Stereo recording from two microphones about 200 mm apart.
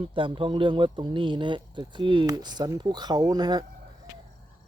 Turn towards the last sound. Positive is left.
turn(degrees=-20)  # may be behind; listen again after turning